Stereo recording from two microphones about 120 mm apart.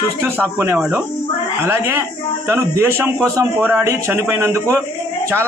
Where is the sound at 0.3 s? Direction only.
20° right (ahead or behind).